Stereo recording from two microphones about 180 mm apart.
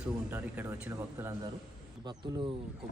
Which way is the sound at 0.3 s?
10° right (ahead or behind).